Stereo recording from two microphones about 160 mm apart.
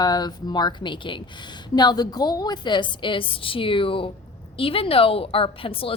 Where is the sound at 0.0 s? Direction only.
25° left (ahead or behind).